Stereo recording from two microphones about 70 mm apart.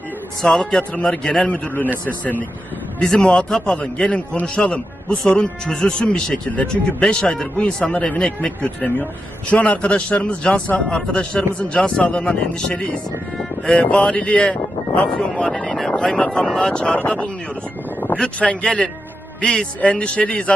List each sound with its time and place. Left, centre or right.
0.4 s a man's voice: centre; by 1.9 s left
3.0 s a man's voice: centre
18.2 s a man's voice: centre